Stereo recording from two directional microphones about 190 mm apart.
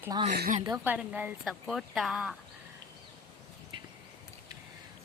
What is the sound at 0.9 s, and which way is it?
Speech, 10° right (ahead or behind).